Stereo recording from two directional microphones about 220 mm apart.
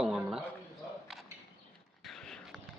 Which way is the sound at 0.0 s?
Centre (ahead or behind).